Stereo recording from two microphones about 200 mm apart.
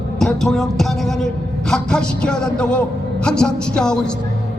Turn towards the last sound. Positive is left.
turn(degrees=5)  # may be behind; listen again after turning